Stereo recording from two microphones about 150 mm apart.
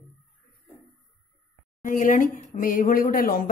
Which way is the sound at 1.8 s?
60° left (ahead or behind).